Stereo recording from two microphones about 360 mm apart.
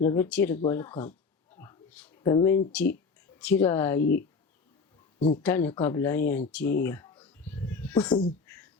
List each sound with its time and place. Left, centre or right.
0.0 s speech: centre
1.5 s a sound: centre
3.3 s speech: centre
4.0 s speech: left
5.4 s speech: centre
6.5 s a sound: centre